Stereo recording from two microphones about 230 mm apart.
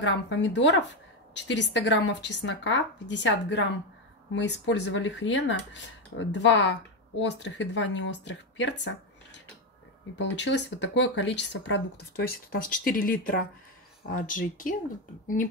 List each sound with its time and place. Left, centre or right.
0.0 s speech: left
12.8 s speech: left